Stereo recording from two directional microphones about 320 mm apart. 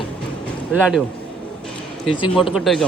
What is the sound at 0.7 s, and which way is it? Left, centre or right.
Speech, centre.